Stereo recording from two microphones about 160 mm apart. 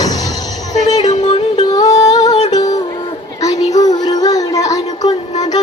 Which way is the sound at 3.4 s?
20° left (ahead or behind).